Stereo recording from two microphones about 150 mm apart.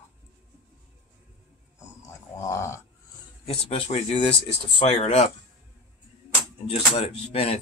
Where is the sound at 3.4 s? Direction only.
40° left (ahead or behind).